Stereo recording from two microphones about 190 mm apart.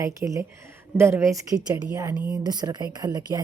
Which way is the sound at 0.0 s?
15° right (ahead or behind).